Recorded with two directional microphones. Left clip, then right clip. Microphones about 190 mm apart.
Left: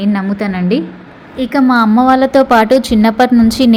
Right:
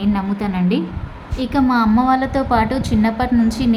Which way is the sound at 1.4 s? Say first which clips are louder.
Left 6 dB; 25° left (ahead or behind).